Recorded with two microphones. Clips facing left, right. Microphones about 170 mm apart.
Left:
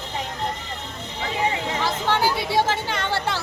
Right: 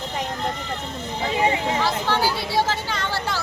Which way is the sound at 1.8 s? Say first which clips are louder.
Left 4 dB; 20° left (ahead or behind).